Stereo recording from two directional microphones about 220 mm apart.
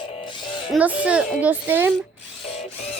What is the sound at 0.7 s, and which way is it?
Speech, 5° right (ahead or behind).